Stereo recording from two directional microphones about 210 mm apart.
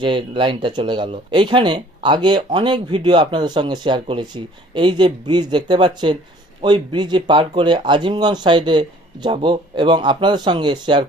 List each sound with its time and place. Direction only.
0.0 s speech: 25° right (ahead or behind)